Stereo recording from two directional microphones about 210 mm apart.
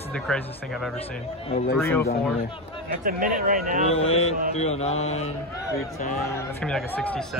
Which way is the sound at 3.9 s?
30° left (ahead or behind).